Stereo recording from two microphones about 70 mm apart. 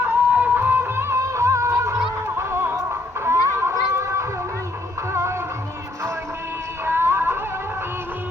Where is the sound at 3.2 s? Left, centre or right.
Right.